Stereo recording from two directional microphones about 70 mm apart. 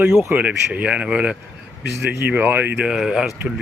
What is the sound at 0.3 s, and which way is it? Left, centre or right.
Speech, right.